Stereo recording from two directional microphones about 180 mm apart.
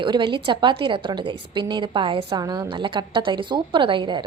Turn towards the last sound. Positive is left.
turn(degrees=-25)  # may be behind; listen again after turning